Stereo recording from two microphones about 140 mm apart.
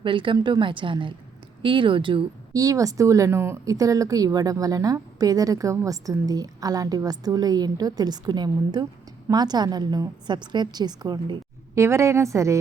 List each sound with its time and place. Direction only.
0.0 s a woman's voice: 35° right (ahead or behind)
2.5 s a woman's voice: 25° right (ahead or behind)